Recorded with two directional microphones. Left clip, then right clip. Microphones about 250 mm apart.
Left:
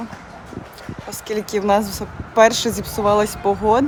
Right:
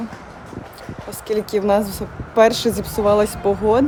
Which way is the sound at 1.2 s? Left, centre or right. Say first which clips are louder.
Right 1 dB; centre.